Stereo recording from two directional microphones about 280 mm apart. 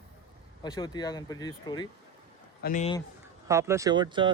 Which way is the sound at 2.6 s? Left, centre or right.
Left.